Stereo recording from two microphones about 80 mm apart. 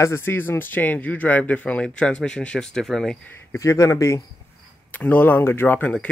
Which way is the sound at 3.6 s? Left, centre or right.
Left.